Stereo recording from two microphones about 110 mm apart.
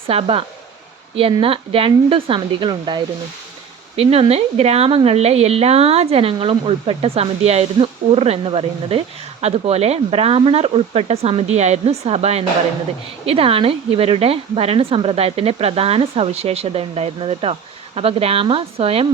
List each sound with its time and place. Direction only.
0.1 s a woman's voice: 55° right (ahead or behind)
3.9 s speech: 65° right (ahead or behind)
13.2 s a woman's voice: 60° right (ahead or behind)